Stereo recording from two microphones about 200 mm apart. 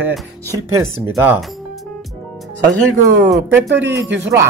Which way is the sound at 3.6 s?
60° right (ahead or behind).